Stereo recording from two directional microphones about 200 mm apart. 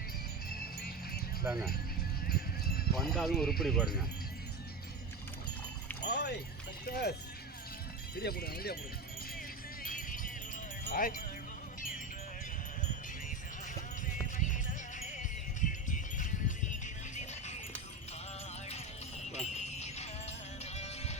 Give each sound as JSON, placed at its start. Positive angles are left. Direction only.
{"t": 0.5, "sound": "music", "side_deg": 50}
{"t": 1.5, "sound": "speech", "side_deg": -5}
{"t": 3.0, "sound": "speech", "side_deg": 0}
{"t": 6.0, "sound": "a sound", "side_deg": 55}
{"t": 6.8, "sound": "speech", "side_deg": 50}
{"t": 9.8, "sound": "music", "side_deg": 45}
{"t": 10.8, "sound": "speech", "side_deg": 45}
{"t": 14.3, "sound": "music", "side_deg": 40}
{"t": 19.2, "sound": "music", "side_deg": 35}